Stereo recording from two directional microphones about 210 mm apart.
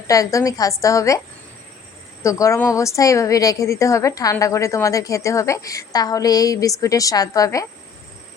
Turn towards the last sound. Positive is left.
turn(degrees=15)  # may be behind; listen again after turning